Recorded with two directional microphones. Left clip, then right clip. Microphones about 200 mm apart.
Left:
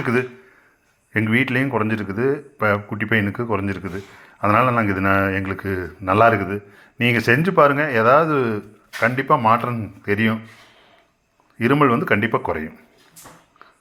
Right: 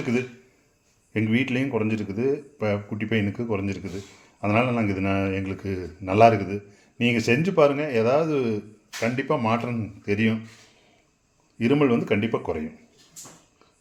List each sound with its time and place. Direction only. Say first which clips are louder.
1.3 s speech: left 6 dB; centre (ahead or behind)
2.7 s speech: left 6 dB; 35° left (ahead or behind)
3.1 s speech: left 6 dB; centre (ahead or behind)
11.6 s speech: left 5 dB; centre (ahead or behind)